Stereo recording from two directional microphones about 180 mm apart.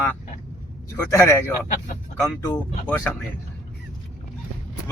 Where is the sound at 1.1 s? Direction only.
15° left (ahead or behind).